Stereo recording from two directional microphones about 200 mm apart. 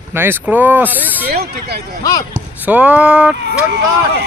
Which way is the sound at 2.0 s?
20° left (ahead or behind).